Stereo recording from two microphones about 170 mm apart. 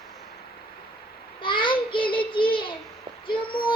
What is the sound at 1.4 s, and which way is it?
Child singing, 30° left (ahead or behind).